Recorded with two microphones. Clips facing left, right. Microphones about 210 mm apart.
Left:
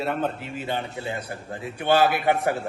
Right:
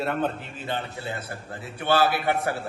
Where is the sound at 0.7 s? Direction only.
15° left (ahead or behind).